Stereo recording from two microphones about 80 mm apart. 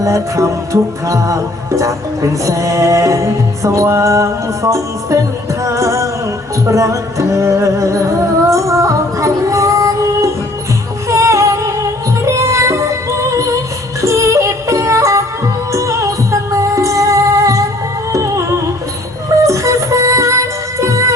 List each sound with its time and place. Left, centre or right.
0.0 s music: right
14.0 s music: right